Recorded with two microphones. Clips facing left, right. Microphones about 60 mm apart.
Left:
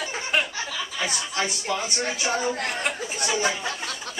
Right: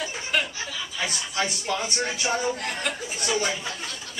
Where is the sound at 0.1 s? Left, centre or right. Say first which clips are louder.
Left 4 dB; left.